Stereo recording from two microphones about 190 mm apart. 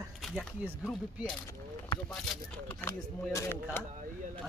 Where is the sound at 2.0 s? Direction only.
5° left (ahead or behind).